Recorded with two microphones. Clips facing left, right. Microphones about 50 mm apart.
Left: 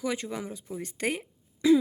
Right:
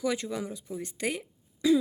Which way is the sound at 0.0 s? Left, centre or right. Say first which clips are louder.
Right 1 dB; left.